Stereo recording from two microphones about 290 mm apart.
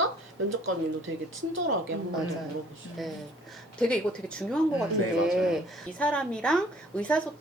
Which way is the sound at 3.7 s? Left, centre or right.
Centre.